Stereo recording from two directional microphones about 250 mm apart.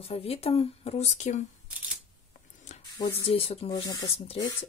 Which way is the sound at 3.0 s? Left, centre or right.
Left.